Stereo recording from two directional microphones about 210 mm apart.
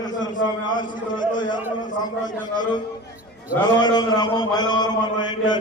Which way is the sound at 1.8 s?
40° left (ahead or behind).